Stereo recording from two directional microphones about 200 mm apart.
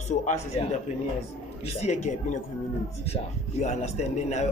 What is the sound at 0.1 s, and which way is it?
A man's voice, 35° left (ahead or behind).